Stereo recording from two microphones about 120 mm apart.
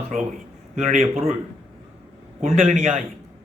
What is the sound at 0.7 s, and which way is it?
Speech, 90° right.